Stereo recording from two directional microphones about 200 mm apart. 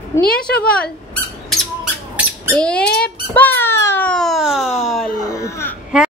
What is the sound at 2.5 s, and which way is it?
Speech, 5° left (ahead or behind).